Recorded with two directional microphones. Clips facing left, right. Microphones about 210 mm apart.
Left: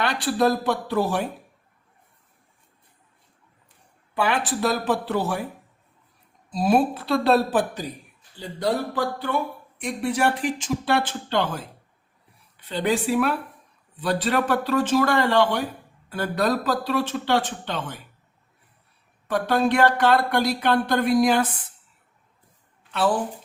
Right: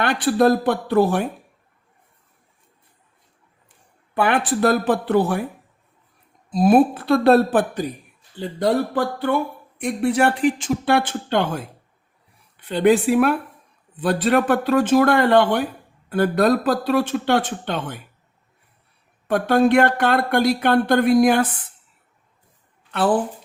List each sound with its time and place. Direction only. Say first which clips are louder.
0.0 s speech: right 5 dB; 55° right (ahead or behind)
4.1 s speech: right 4 dB; 55° right (ahead or behind)
6.5 s speech: right 6 dB; 55° right (ahead or behind)
19.3 s speech: right 5 dB; 55° right (ahead or behind)